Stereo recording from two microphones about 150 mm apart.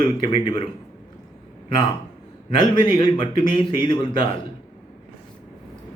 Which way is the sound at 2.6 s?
35° left (ahead or behind).